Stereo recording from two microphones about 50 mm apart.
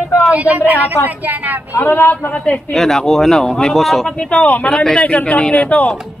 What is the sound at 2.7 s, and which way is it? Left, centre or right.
Speech, centre.